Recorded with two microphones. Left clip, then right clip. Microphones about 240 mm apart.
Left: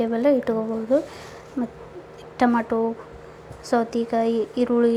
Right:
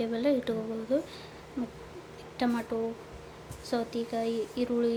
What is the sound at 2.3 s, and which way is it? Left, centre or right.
A woman's voice, centre.